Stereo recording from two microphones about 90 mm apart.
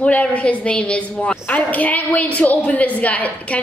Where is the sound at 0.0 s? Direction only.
15° left (ahead or behind).